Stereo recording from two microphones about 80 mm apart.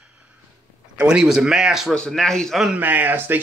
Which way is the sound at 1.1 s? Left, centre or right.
Centre.